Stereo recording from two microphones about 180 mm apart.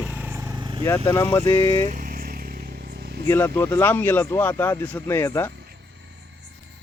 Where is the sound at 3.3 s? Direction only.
15° left (ahead or behind).